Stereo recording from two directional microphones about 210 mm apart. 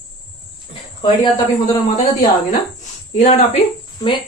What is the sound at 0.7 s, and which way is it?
Speech, 25° left (ahead or behind).